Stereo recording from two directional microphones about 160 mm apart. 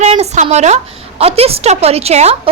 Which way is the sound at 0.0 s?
40° right (ahead or behind).